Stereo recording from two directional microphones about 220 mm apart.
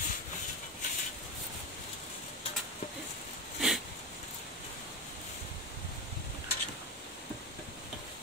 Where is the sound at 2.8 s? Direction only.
30° left (ahead or behind).